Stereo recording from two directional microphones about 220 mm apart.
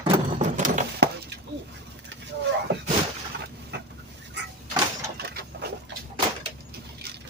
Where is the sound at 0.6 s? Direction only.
50° right (ahead or behind).